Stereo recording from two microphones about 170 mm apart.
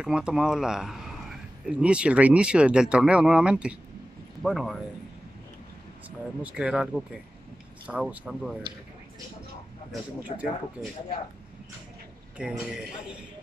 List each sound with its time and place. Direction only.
0.0 s speech: 5° right (ahead or behind)
6.0 s speech: 5° right (ahead or behind)
10.3 s speech: 35° left (ahead or behind)
10.8 s speech: 10° right (ahead or behind)
12.4 s speech: 5° right (ahead or behind)